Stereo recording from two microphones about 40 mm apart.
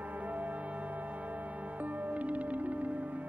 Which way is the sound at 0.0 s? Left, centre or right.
Right.